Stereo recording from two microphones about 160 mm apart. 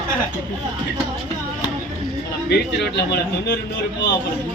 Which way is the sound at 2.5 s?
90° left.